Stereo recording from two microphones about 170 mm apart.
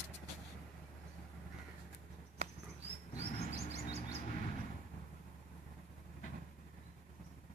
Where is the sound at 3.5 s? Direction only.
40° right (ahead or behind).